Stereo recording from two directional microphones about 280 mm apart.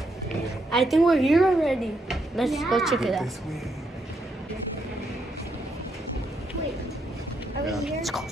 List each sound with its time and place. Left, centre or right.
0.7 s speech: centre
7.6 s speech: centre